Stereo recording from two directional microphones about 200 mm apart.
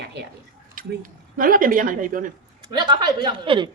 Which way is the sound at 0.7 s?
45° right (ahead or behind).